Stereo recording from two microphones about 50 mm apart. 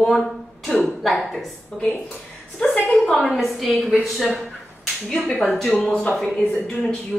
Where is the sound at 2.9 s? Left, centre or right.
Centre.